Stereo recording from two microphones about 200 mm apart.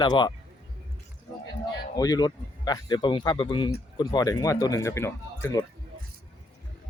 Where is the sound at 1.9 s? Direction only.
20° left (ahead or behind).